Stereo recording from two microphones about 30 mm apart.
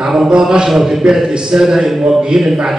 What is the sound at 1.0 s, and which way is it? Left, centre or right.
Speech, centre.